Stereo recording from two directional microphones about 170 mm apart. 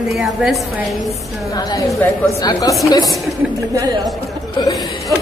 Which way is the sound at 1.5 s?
20° left (ahead or behind).